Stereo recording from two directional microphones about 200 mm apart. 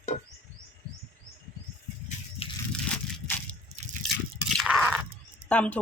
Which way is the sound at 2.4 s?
30° left (ahead or behind).